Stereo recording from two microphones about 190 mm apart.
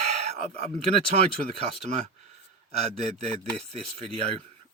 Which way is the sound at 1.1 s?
35° right (ahead or behind).